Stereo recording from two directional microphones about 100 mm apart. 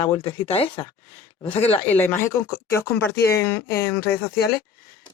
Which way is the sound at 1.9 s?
20° left (ahead or behind).